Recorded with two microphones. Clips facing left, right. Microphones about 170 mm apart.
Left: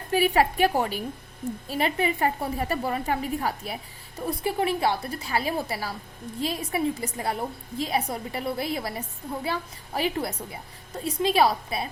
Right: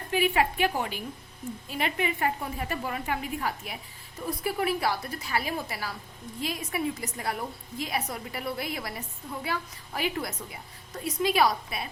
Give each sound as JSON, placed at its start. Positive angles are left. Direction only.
{"t": 0.1, "sound": "a woman's voice", "side_deg": 40}